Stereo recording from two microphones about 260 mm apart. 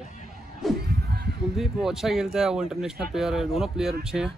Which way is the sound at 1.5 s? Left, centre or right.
Centre.